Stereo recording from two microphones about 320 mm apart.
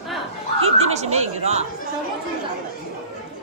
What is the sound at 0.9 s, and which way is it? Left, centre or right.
Speech, centre.